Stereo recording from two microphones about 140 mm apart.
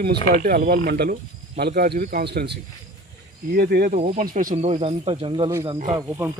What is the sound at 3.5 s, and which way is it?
Speech, 90° right.